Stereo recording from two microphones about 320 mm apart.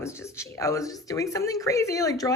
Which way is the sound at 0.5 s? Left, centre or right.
Centre.